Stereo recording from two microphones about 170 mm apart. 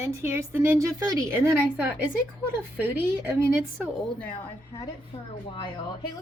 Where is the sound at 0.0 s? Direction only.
15° right (ahead or behind).